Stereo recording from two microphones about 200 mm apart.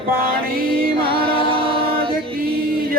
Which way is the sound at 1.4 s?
25° right (ahead or behind).